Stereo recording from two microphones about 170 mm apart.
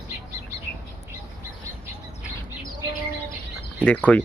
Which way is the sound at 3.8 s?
10° left (ahead or behind).